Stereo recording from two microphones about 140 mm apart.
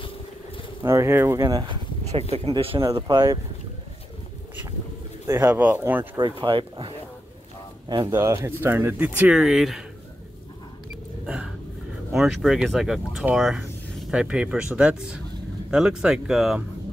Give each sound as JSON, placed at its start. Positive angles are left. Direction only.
{"t": 0.8, "sound": "speech", "side_deg": -20}
{"t": 2.3, "sound": "speech", "side_deg": -40}
{"t": 2.8, "sound": "speech", "side_deg": -25}
{"t": 5.2, "sound": "speech", "side_deg": -15}
{"t": 6.1, "sound": "speech", "side_deg": -35}
{"t": 8.3, "sound": "speech", "side_deg": -15}
{"t": 11.2, "sound": "a sound", "side_deg": -5}
{"t": 12.1, "sound": "speech", "side_deg": 0}